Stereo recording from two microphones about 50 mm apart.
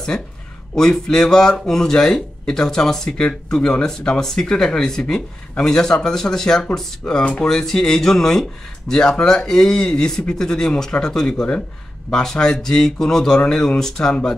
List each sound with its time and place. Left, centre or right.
0.1 s speech: left
0.7 s speech: centre